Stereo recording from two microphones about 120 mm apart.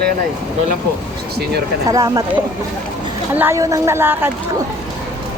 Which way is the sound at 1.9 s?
30° right (ahead or behind).